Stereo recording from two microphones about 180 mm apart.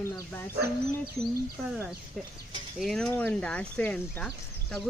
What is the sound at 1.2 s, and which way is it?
Speech, 35° right (ahead or behind).